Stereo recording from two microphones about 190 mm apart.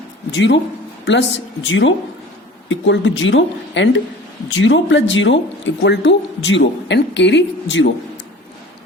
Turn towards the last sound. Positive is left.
turn(degrees=70)  # may be behind; listen again after turning